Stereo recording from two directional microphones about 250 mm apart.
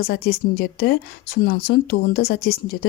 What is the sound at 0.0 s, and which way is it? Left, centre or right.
Speech, left.